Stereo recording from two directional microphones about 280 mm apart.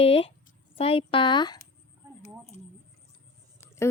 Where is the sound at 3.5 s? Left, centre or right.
Centre.